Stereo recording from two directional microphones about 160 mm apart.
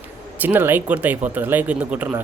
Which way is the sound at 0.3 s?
10° right (ahead or behind).